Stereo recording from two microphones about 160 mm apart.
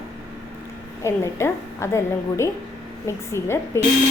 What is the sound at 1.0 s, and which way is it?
A woman's voice, 15° left (ahead or behind).